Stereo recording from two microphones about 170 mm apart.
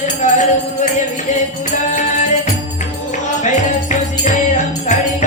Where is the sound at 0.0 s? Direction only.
45° left (ahead or behind).